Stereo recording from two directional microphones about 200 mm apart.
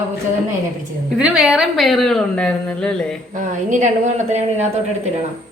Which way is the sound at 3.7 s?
40° right (ahead or behind).